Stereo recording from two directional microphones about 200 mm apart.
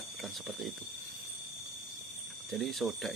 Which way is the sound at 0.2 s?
Centre (ahead or behind).